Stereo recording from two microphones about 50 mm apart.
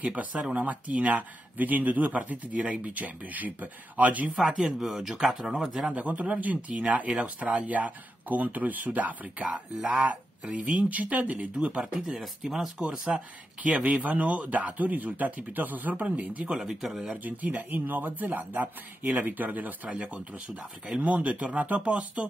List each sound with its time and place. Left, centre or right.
0.0 s a man's voice: right
4.4 s speech: centre
5.9 s a man's voice: right
11.8 s speech: centre
12.7 s a man's voice: centre
16.4 s speech: centre
17.2 s a man's voice: right
21.0 s speech: right